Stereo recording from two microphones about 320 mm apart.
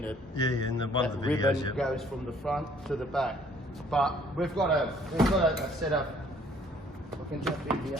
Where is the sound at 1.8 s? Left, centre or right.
Centre.